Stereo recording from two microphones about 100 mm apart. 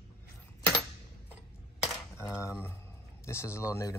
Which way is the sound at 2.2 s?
30° left (ahead or behind).